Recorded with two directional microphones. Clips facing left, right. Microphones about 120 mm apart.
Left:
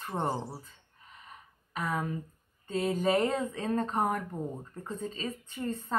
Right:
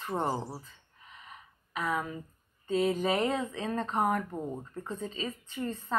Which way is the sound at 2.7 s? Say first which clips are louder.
Even; 40° left (ahead or behind).